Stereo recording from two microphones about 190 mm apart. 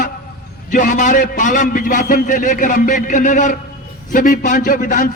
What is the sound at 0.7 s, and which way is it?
A man's voice, 45° left (ahead or behind).